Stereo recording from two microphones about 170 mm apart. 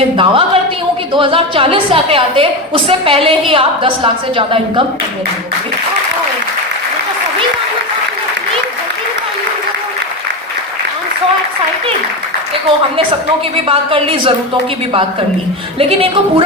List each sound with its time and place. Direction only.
0.2 s a woman's voice: 30° right (ahead or behind)
13.7 s a woman's voice: 35° right (ahead or behind)
15.8 s a woman's voice: 35° right (ahead or behind)